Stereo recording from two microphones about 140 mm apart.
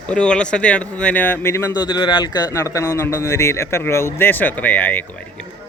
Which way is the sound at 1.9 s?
35° left (ahead or behind).